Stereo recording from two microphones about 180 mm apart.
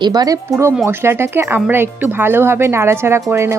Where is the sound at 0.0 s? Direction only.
20° right (ahead or behind).